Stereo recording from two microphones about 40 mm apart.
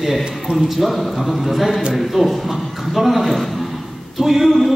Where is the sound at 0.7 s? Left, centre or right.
Centre.